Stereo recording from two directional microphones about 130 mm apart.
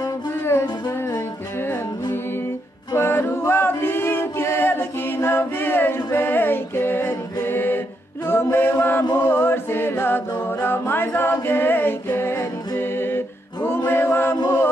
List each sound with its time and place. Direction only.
2.9 s music: 20° left (ahead or behind)
8.3 s a capella: 15° left (ahead or behind)
11.4 s music: 15° left (ahead or behind)